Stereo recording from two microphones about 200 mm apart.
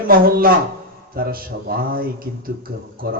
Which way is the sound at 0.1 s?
45° right (ahead or behind).